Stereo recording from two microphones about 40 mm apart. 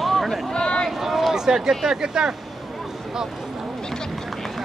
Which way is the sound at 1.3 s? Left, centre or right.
Centre.